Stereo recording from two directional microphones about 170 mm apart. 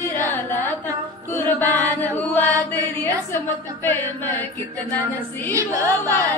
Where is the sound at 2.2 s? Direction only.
10° left (ahead or behind).